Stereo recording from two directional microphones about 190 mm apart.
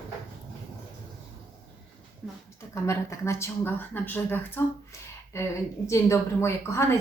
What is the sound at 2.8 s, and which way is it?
A woman's voice, 15° left (ahead or behind).